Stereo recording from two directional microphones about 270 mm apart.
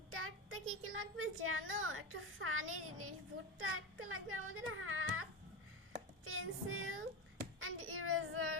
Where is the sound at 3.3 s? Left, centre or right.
Right.